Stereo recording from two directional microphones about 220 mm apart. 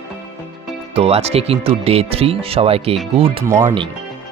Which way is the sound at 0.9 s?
25° right (ahead or behind).